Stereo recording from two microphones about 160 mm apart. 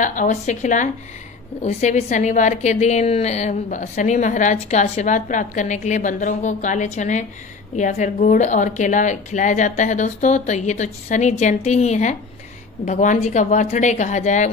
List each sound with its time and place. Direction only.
0.0 s a woman's voice: 55° left (ahead or behind)